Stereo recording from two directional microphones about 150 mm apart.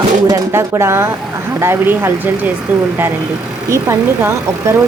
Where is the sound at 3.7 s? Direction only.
20° right (ahead or behind).